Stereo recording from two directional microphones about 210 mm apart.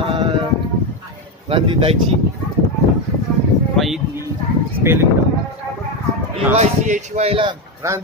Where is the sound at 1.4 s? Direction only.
25° right (ahead or behind).